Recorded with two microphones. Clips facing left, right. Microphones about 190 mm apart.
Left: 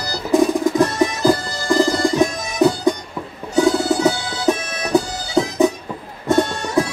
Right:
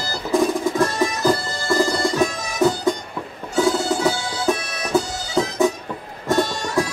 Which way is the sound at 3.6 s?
20° left (ahead or behind).